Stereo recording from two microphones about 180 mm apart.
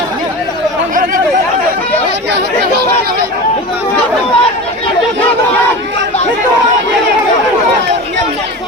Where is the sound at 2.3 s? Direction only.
65° right (ahead or behind).